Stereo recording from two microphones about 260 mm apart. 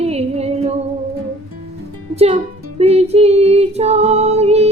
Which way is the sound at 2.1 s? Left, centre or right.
Right.